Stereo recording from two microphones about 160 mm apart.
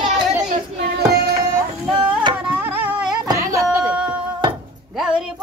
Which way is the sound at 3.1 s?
25° right (ahead or behind).